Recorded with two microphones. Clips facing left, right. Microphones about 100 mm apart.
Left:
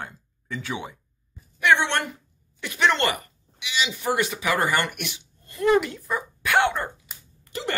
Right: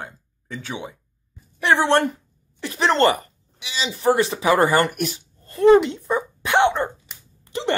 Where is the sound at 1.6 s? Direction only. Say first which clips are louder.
Right 4 dB; 35° right (ahead or behind).